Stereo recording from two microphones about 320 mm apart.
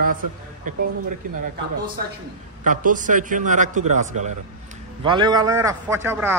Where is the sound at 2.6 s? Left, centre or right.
Right.